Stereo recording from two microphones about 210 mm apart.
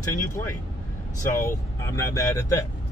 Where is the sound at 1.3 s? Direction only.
15° left (ahead or behind).